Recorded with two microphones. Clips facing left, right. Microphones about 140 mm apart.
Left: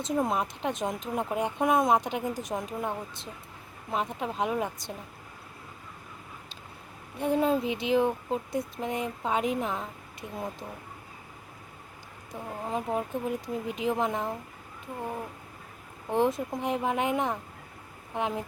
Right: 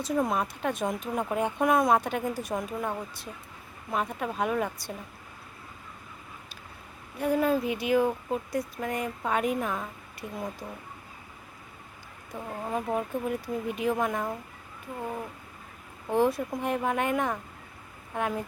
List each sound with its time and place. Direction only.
0.0 s a woman's voice: 20° left (ahead or behind)
3.9 s speech: 20° left (ahead or behind)
7.2 s speech: 25° left (ahead or behind)
12.3 s speech: 15° left (ahead or behind)
16.0 s speech: 20° left (ahead or behind)